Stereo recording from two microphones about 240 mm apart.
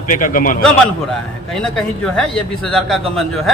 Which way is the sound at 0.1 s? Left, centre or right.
Left.